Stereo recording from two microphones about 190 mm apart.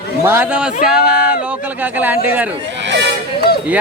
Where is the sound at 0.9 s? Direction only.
5° right (ahead or behind).